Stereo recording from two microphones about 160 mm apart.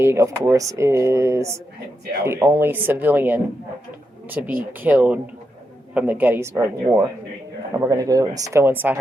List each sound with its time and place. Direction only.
0.0 s speech: 15° right (ahead or behind)
7.7 s speech: 20° right (ahead or behind)